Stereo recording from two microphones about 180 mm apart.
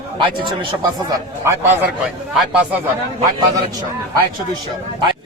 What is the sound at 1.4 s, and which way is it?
Speech, 15° right (ahead or behind).